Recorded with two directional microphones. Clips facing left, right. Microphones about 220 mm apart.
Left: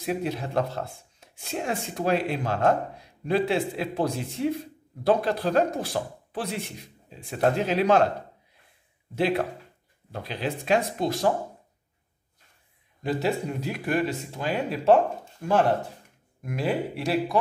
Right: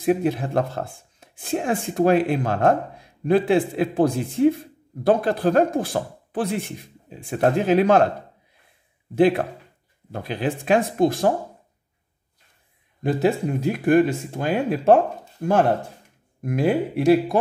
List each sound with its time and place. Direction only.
0.0 s speech: 50° right (ahead or behind)
9.1 s speech: 50° right (ahead or behind)
13.0 s speech: 50° right (ahead or behind)